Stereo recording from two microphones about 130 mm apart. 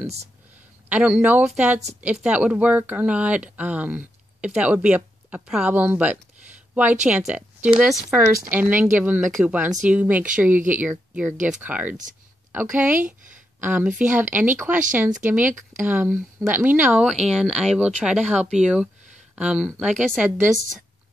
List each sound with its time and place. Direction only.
0.0 s speech: 55° right (ahead or behind)
0.8 s speech: 10° right (ahead or behind)
8.2 s speech: 15° right (ahead or behind)